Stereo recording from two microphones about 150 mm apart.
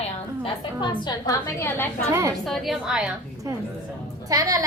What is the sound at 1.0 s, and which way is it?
Speech, 30° left (ahead or behind).